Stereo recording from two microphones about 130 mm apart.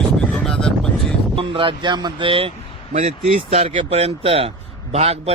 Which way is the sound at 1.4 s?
40° right (ahead or behind).